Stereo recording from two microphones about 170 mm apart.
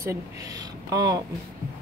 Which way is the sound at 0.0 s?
20° right (ahead or behind).